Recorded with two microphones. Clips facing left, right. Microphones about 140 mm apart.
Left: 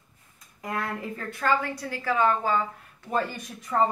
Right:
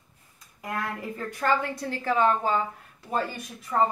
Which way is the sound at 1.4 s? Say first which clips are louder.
Even; 20° right (ahead or behind).